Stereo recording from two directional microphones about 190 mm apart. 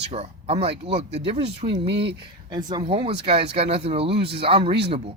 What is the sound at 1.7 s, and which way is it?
Speech, 65° right (ahead or behind).